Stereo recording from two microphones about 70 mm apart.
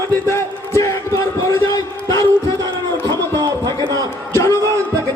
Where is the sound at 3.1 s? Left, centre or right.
Right.